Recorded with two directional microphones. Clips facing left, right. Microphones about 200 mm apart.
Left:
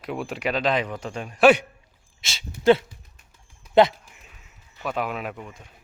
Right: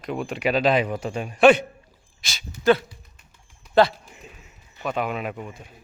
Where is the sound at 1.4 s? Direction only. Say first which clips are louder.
Right 1 dB; 10° left (ahead or behind).